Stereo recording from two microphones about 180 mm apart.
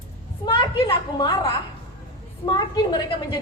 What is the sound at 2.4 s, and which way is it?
Speech, 25° left (ahead or behind).